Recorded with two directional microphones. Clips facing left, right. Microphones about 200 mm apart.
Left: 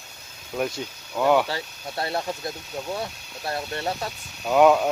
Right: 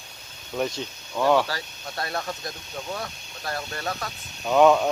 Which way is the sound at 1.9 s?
25° left (ahead or behind).